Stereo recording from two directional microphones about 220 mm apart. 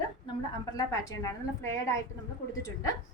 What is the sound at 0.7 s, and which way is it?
Speech, 15° left (ahead or behind).